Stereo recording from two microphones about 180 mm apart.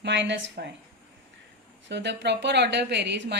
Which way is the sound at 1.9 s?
75° right (ahead or behind).